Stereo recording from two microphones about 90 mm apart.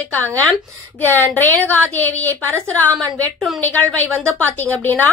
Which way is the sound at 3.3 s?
Centre (ahead or behind).